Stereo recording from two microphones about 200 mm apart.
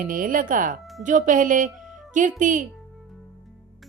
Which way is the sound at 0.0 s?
45° right (ahead or behind).